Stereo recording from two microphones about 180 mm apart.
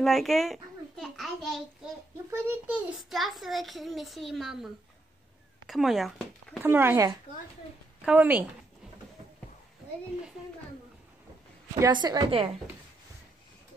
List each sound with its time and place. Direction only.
0.0 s babbling: centre (ahead or behind)
2.3 s a child's voice: 10° right (ahead or behind)
5.7 s a child's voice: centre (ahead or behind)
6.7 s speech: 10° right (ahead or behind)
11.8 s a woman's voice: 25° right (ahead or behind)